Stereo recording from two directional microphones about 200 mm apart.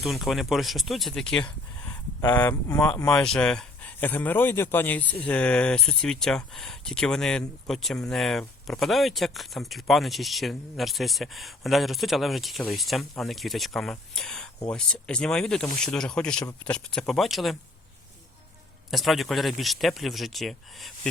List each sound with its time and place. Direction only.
0.0 s a man's voice: centre (ahead or behind); by 3.1 s 15° left (ahead or behind)
3.1 s a man's voice: 5° left (ahead or behind)
18.9 s speech: centre (ahead or behind)